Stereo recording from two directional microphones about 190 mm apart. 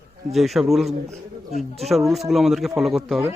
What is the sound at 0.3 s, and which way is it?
Speech, centre (ahead or behind).